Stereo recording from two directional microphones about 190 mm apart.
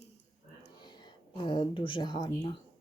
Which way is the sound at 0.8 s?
20° left (ahead or behind).